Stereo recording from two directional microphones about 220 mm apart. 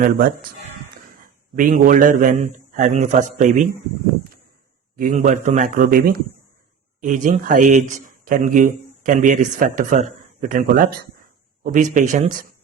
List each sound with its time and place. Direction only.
0.0 s a man's voice: 40° right (ahead or behind)
4.9 s a man's voice: 35° right (ahead or behind)